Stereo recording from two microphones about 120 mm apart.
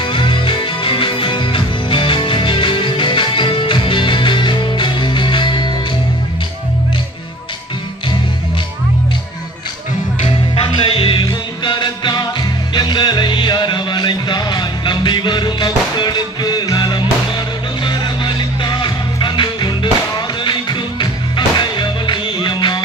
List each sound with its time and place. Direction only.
0.0 s music: 45° left (ahead or behind)
10.2 s music: 45° left (ahead or behind)